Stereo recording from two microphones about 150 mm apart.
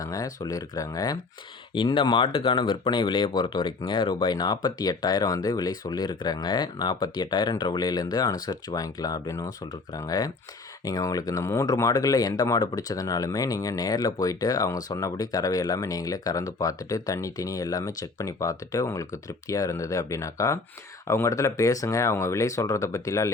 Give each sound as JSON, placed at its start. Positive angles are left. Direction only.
{"t": 0.0, "sound": "speech", "side_deg": 25}